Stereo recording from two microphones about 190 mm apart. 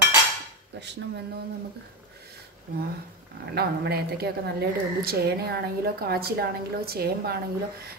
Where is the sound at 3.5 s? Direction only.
55° right (ahead or behind).